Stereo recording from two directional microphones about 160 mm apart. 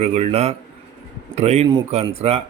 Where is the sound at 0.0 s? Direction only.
40° right (ahead or behind).